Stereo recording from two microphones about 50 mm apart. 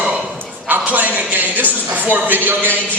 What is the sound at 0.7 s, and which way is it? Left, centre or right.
A man's voice, right.